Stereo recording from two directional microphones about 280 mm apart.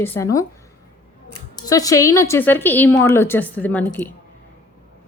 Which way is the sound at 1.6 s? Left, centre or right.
Centre.